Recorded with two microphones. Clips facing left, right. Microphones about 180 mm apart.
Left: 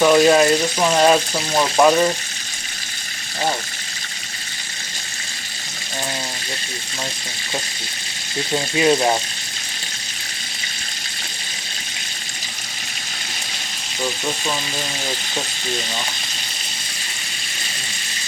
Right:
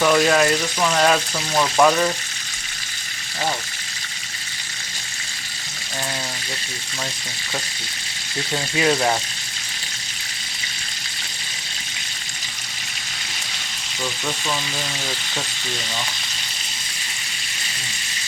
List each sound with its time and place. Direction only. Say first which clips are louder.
0.0 s speech: left 4 dB; 20° left (ahead or behind)
8.5 s speech: left 3 dB; 20° left (ahead or behind)
14.0 s speech: left 3 dB; 20° left (ahead or behind)